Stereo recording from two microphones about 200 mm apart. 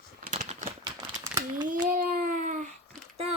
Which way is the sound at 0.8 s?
15° right (ahead or behind).